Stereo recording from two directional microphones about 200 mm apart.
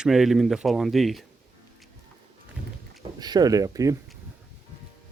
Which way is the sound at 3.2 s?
20° right (ahead or behind).